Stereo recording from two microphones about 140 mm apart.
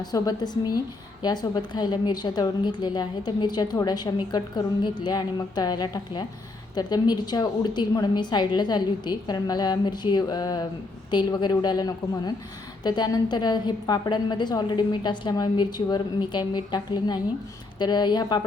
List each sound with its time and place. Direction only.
0.0 s a woman's voice: 30° left (ahead or behind)